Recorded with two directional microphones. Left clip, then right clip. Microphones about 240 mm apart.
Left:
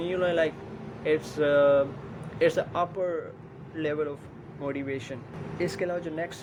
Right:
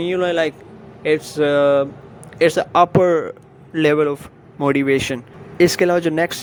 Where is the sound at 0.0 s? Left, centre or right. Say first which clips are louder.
Right 7 dB; right.